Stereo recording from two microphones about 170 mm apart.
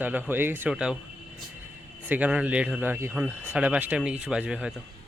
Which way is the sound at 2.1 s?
10° right (ahead or behind).